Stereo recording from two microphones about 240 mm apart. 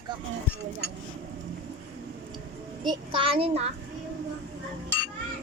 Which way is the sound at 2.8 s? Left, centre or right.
Right.